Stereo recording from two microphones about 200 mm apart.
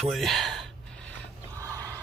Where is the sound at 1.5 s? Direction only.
15° right (ahead or behind).